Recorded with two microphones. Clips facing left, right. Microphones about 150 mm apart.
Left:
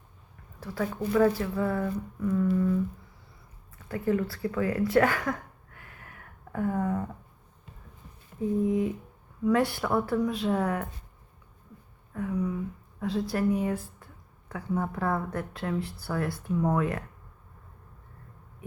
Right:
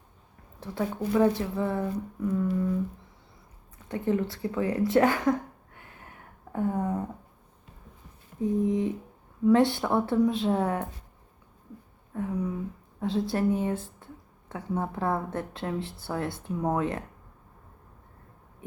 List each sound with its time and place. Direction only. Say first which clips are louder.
0.6 s a woman's voice: right 1 dB; 25° right (ahead or behind)
3.8 s a woman's voice: even; 25° right (ahead or behind)
4.9 s a sound: right 3 dB; 25° right (ahead or behind)
8.6 s a woman's voice: even; 20° right (ahead or behind)
12.1 s a sound: even; 25° right (ahead or behind)
13.0 s a woman's voice: right 1 dB; 25° right (ahead or behind)